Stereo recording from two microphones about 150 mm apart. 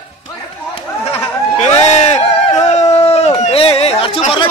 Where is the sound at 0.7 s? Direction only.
45° left (ahead or behind).